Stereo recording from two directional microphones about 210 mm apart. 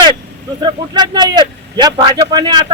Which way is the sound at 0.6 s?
20° right (ahead or behind).